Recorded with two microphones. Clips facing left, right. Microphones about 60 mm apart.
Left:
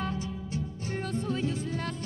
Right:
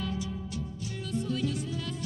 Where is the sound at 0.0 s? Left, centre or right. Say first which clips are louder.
Left 1 dB; left.